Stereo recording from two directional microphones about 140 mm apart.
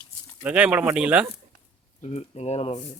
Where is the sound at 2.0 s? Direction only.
50° left (ahead or behind).